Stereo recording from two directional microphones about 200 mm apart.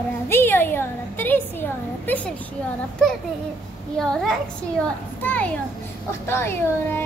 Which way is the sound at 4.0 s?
Centre (ahead or behind).